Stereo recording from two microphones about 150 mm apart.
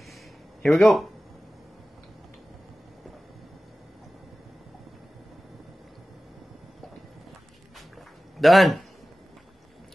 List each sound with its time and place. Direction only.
0.6 s speech: centre (ahead or behind)
8.4 s a man's voice: centre (ahead or behind)